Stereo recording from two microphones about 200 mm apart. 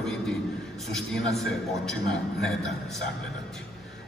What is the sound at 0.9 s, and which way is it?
A man's voice, centre (ahead or behind).